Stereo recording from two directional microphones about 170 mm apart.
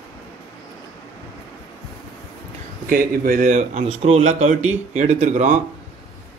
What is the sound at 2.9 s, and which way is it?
A man's voice, 55° right (ahead or behind).